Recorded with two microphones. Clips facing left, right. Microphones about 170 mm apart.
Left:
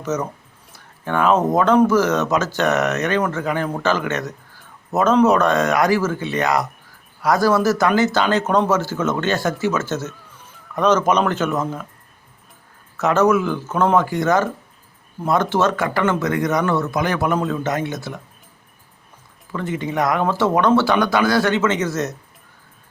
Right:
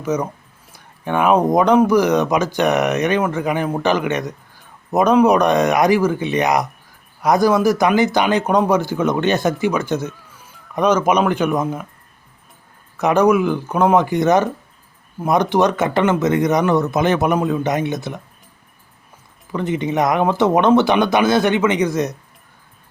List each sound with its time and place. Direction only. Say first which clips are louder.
0.0 s speech: right 3 dB; 10° right (ahead or behind)
13.0 s speech: right 2 dB; 15° right (ahead or behind)
19.5 s speech: right 3 dB; 20° right (ahead or behind)